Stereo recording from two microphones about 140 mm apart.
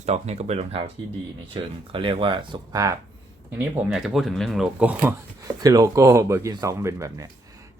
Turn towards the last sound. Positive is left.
turn(degrees=-20)  # may be behind; listen again after turning